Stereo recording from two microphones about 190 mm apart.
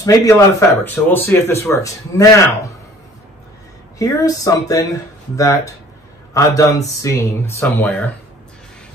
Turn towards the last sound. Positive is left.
turn(degrees=10)  # may be behind; listen again after turning